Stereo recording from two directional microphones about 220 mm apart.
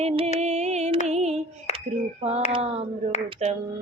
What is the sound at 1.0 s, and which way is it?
Female singing, 30° right (ahead or behind).